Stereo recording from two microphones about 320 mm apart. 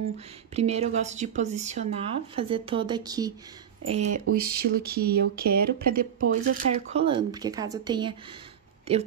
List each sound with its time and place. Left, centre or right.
0.6 s speech: centre
3.9 s speech: right